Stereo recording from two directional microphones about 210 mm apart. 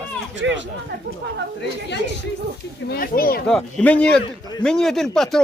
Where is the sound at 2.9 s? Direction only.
45° left (ahead or behind).